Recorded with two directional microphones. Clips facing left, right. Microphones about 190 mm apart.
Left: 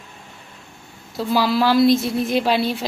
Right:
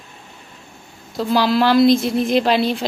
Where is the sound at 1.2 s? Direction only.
5° left (ahead or behind).